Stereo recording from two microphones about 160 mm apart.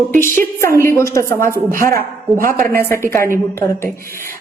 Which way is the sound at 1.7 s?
60° right (ahead or behind).